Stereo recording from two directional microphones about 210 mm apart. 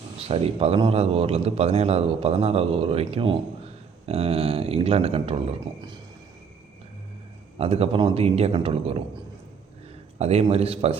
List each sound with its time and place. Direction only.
0.2 s a man's voice: 30° right (ahead or behind)
7.6 s a man's voice: 30° right (ahead or behind)
10.2 s a man's voice: 30° right (ahead or behind)